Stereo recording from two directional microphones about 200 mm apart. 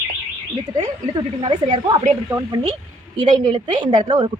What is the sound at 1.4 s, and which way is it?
A woman's voice, 25° right (ahead or behind).